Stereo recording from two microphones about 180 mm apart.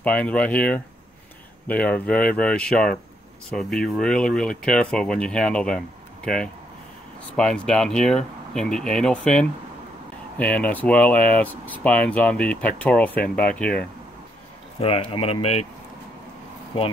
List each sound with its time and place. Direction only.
0.0 s speech: 5° left (ahead or behind)
10.6 s speech: 10° left (ahead or behind)
14.8 s speech: 30° left (ahead or behind)